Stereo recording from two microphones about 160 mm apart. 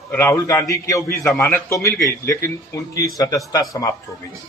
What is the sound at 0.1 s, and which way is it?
A man's voice, 15° left (ahead or behind).